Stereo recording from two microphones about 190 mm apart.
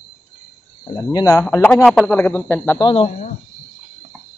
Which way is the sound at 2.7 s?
25° left (ahead or behind).